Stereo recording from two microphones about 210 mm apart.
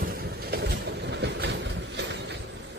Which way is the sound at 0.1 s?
45° right (ahead or behind).